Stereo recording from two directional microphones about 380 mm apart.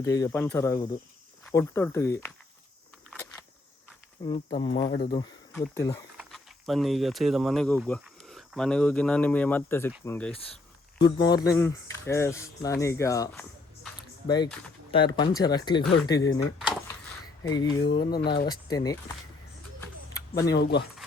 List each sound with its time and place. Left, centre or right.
0.0 s speech: centre
4.3 s speech: centre
4.7 s speech: left
5.1 s speech: centre
15.4 s speech: centre
17.4 s speech: centre
18.2 s speech: left
18.4 s speech: centre
19.8 s a sound: centre
20.6 s speech: left